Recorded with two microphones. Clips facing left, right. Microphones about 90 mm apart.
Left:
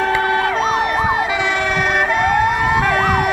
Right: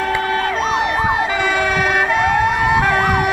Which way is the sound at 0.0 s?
15° left (ahead or behind).